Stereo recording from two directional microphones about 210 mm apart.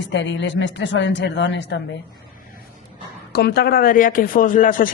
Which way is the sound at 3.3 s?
50° left (ahead or behind).